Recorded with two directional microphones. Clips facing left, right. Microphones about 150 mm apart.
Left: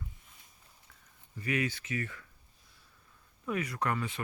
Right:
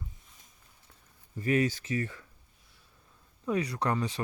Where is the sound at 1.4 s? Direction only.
40° right (ahead or behind).